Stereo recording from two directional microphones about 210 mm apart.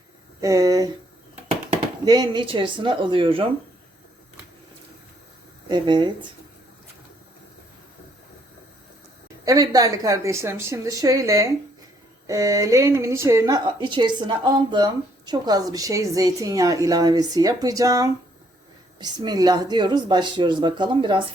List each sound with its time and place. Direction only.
0.4 s speech: 15° right (ahead or behind)
2.0 s speech: 20° right (ahead or behind)
5.6 s speech: 20° right (ahead or behind)
9.4 s a woman's voice: 15° right (ahead or behind)